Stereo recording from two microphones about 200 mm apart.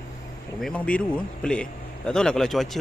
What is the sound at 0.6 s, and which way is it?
A man's voice, 5° left (ahead or behind).